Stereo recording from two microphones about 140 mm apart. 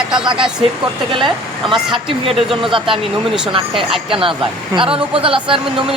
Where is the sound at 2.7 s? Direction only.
35° right (ahead or behind).